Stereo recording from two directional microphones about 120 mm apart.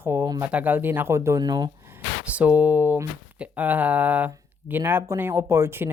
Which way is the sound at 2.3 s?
10° right (ahead or behind).